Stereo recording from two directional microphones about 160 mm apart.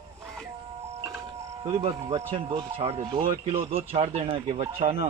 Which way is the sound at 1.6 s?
35° right (ahead or behind).